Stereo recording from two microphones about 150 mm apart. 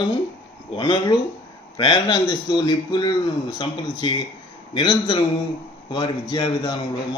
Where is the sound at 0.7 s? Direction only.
30° left (ahead or behind).